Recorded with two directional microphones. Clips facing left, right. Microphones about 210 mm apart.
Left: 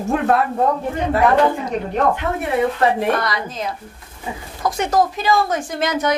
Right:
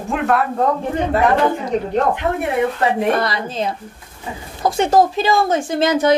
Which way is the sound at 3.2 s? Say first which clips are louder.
Right 3 dB; 30° right (ahead or behind).